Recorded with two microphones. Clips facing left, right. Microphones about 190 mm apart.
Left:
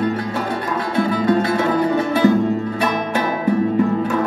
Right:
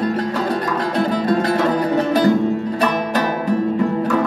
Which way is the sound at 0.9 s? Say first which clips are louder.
Left 2 dB; 35° right (ahead or behind).